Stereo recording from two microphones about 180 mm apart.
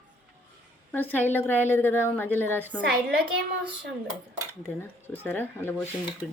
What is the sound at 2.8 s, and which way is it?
Speech, 75° right (ahead or behind).